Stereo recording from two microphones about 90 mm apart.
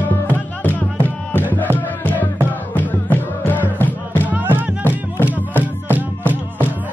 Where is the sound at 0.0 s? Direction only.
20° left (ahead or behind).